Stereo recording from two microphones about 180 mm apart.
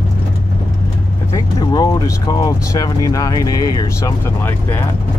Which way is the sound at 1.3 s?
20° left (ahead or behind).